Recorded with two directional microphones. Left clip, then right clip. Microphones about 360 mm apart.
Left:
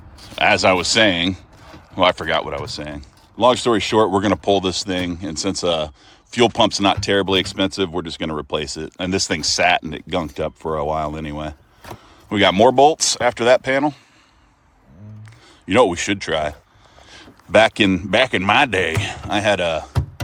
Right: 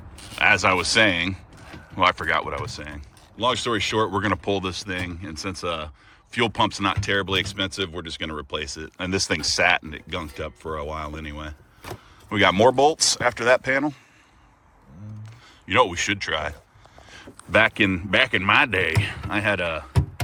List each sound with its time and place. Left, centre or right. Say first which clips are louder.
0.3 s speech: left 4 dB; centre
15.6 s speech: left 4 dB; centre
17.1 s a sound: left 5 dB; centre
18.1 s speech: left 2 dB; centre